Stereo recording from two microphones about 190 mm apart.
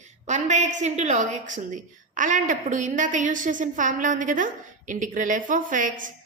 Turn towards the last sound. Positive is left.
turn(degrees=-45)  # may be behind; listen again after turning